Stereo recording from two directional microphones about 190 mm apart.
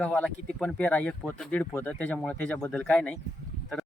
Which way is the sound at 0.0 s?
10° left (ahead or behind).